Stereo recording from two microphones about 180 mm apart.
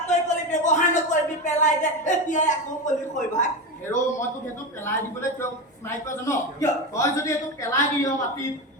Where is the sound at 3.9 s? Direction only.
10° left (ahead or behind).